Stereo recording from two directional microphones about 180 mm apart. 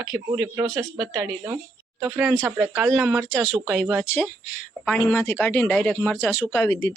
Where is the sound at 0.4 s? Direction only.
15° right (ahead or behind).